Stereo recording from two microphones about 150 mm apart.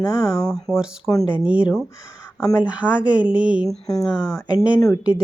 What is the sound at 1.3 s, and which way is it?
Speech, 10° right (ahead or behind).